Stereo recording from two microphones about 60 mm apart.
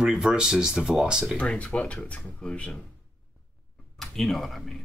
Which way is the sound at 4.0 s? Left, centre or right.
Centre.